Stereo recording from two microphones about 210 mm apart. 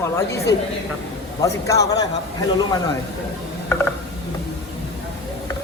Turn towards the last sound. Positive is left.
turn(degrees=10)  # may be behind; listen again after turning